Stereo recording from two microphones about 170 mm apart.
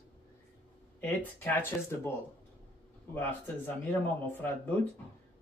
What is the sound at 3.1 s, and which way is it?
Speech, 10° left (ahead or behind).